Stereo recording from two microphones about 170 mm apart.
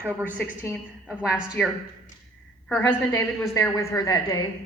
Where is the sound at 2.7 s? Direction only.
10° left (ahead or behind).